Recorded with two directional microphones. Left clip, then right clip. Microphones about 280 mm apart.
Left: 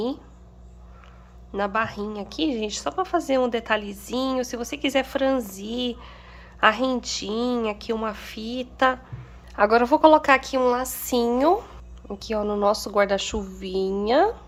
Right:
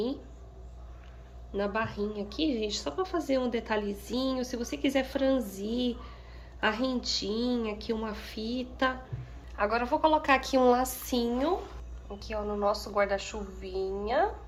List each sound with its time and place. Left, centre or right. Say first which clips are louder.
1.5 s a woman's voice: left 6 dB; centre
9.6 s a woman's voice: left 10 dB; left